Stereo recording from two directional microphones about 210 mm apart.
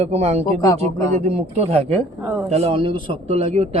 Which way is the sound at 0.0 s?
30° right (ahead or behind).